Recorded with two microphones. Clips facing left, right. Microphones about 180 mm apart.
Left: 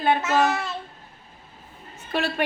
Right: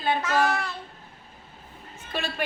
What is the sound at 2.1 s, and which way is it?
Speech, 65° left (ahead or behind).